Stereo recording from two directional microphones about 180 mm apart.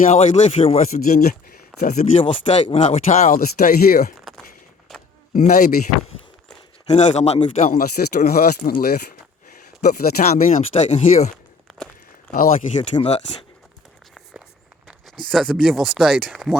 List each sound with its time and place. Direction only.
0.0 s speech: 40° left (ahead or behind)
1.0 s speech: 55° left (ahead or behind)
2.0 s speech: 30° left (ahead or behind); by 4.1 s 55° left (ahead or behind)
4.9 s keys jangling: centre (ahead or behind)
5.3 s speech: 50° left (ahead or behind)
6.8 s speech: 40° left (ahead or behind)
7.6 s speech: 55° left (ahead or behind)
10.6 s speech: 35° left (ahead or behind)
11.7 s walk: centre (ahead or behind)
12.3 s speech: 55° left (ahead or behind)
13.0 s speech: 35° left (ahead or behind)
14.8 s speech: centre (ahead or behind)